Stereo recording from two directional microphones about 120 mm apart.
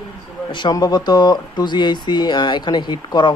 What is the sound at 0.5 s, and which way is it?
A man's voice, 40° left (ahead or behind).